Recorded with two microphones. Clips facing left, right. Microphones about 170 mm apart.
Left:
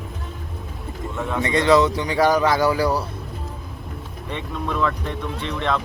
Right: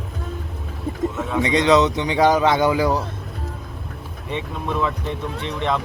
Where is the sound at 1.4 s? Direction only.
20° right (ahead or behind).